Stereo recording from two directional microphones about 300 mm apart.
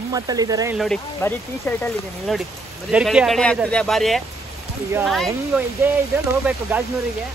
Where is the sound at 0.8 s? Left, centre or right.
Centre.